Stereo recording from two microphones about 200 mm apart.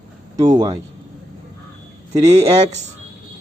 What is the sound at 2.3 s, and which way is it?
Speech, 30° right (ahead or behind).